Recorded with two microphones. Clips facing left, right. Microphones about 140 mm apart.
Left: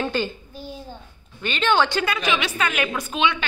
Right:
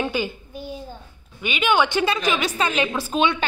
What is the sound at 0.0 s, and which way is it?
Speech, 10° right (ahead or behind).